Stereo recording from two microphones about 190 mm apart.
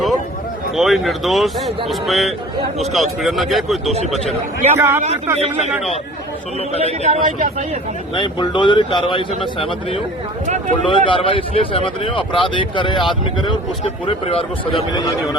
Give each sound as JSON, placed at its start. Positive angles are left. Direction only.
{"t": 0.8, "sound": "speech", "side_deg": 0}
{"t": 4.8, "sound": "speech", "side_deg": -10}
{"t": 5.4, "sound": "speech", "side_deg": -35}
{"t": 7.0, "sound": "speech", "side_deg": -35}
{"t": 8.1, "sound": "speech", "side_deg": 25}
{"t": 10.4, "sound": "speech", "side_deg": -40}
{"t": 10.8, "sound": "speech", "side_deg": 25}